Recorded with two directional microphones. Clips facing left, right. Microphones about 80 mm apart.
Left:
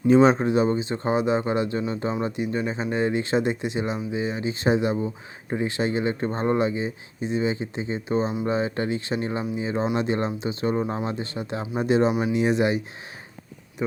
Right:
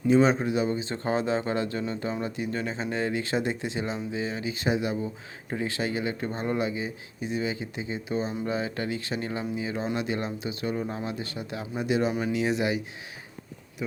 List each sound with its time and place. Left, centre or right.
0.1 s speech: left
0.8 s speech: left
12.1 s speech: centre